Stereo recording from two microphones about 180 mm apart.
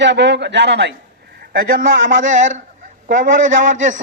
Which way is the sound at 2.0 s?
90° right.